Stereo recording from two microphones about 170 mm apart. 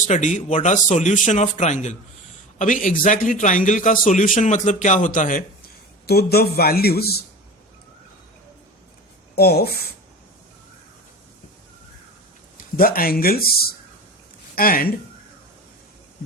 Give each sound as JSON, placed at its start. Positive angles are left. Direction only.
{"t": 0.1, "sound": "a man's voice", "side_deg": 45}
{"t": 6.1, "sound": "speech", "side_deg": 70}
{"t": 9.3, "sound": "speech", "side_deg": 65}
{"t": 12.7, "sound": "speech", "side_deg": 60}